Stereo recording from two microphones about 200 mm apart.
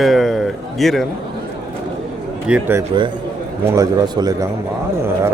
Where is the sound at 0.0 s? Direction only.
Centre (ahead or behind).